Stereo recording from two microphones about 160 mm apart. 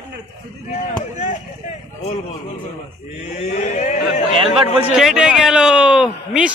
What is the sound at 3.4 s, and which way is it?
Speech, 45° left (ahead or behind).